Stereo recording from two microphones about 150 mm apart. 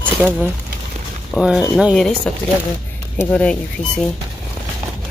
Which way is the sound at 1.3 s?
5° right (ahead or behind).